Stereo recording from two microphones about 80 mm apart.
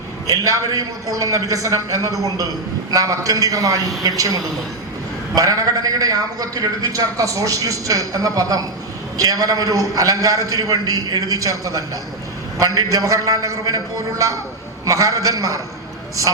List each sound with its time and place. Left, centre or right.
0.3 s a man's voice: right
5.3 s a man's voice: right